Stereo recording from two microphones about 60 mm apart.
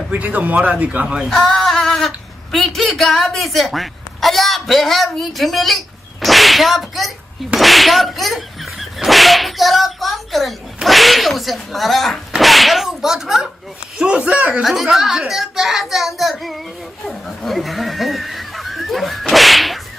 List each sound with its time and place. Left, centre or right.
0.4 s a man's voice: right
1.2 s a man's voice: centre
14.6 s speech: centre
17.1 s a sound: centre